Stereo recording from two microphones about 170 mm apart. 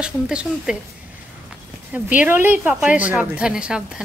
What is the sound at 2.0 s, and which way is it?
A woman's voice, 10° right (ahead or behind).